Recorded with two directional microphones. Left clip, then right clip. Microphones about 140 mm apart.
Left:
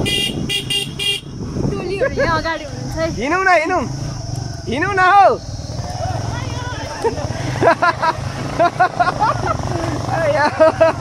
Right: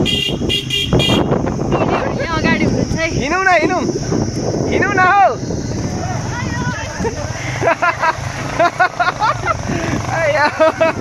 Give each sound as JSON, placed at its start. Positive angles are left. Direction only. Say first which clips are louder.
{"t": 2.4, "sound": "speech", "louder": "right 7 dB", "side_deg": 5}
{"t": 4.6, "sound": "speech", "louder": "right 1 dB", "side_deg": 50}
{"t": 7.6, "sound": "vehicle", "louder": "left 1 dB", "side_deg": 35}
{"t": 8.5, "sound": "speech", "louder": "right 1 dB", "side_deg": -15}
{"t": 10.6, "sound": "speech", "louder": "left 4 dB", "side_deg": -5}